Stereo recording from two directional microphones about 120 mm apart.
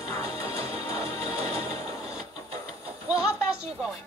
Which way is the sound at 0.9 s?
60° right (ahead or behind).